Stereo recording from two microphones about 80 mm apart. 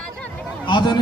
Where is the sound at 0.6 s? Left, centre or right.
Left.